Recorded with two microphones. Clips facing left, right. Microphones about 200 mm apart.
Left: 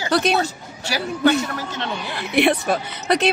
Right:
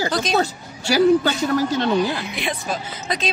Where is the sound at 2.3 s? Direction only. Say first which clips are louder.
Left 8 dB; 65° left (ahead or behind).